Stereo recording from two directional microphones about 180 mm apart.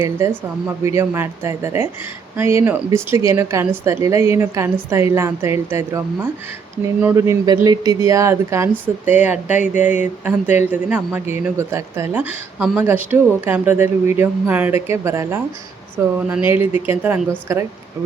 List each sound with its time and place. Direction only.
0.2 s speech: 15° right (ahead or behind)